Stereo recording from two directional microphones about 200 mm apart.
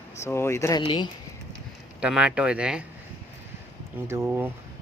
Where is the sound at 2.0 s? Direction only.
5° right (ahead or behind).